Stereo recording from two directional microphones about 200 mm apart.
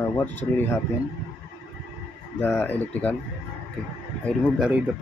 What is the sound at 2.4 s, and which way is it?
Speech, 10° left (ahead or behind).